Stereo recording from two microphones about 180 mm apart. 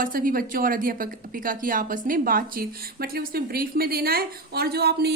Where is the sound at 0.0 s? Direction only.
50° right (ahead or behind).